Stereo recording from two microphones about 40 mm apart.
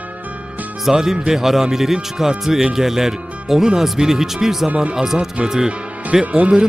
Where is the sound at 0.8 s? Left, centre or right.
Centre.